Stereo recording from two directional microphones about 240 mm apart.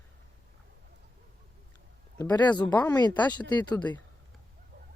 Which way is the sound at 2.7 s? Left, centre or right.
Centre.